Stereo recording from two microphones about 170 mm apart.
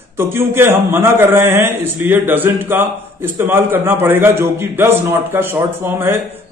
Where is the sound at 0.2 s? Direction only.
15° right (ahead or behind).